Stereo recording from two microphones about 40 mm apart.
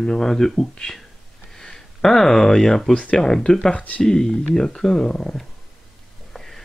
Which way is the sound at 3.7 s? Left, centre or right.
Left.